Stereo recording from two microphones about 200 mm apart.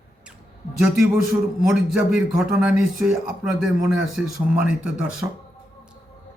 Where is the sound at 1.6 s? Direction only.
Centre (ahead or behind).